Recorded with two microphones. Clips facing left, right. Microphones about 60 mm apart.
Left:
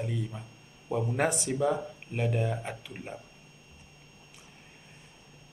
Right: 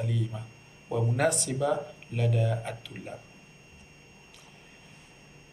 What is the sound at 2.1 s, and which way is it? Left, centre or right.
Speech, left.